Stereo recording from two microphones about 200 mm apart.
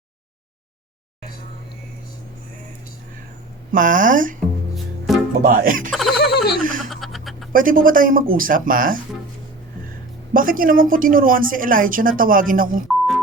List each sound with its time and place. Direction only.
3.7 s speech: 40° right (ahead or behind)
4.4 s music: centre (ahead or behind)
5.4 s a woman's voice: 45° right (ahead or behind)
5.9 s a sound: centre (ahead or behind)
6.2 s a sound: 50° left (ahead or behind)
6.6 s speech: 40° right (ahead or behind)
6.9 s a sound: centre (ahead or behind)
7.5 s a woman's voice: 45° right (ahead or behind)
10.3 s a woman's voice: 45° right (ahead or behind)